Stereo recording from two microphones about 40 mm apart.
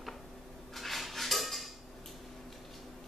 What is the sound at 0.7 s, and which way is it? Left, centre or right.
Dishes, centre.